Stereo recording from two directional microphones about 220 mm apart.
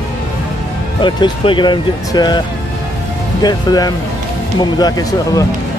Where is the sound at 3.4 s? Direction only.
20° left (ahead or behind).